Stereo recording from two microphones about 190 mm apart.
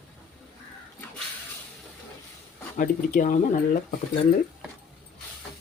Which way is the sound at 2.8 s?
45° left (ahead or behind).